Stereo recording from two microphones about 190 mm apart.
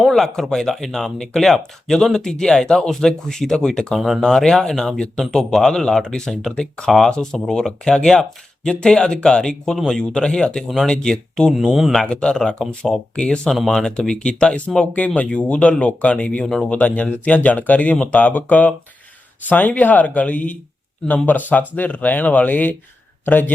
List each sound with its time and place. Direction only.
0.0 s speech: centre (ahead or behind)